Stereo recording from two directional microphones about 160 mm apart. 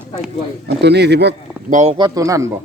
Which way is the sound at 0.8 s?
90° right.